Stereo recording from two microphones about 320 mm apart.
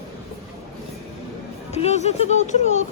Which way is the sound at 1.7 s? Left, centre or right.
Centre.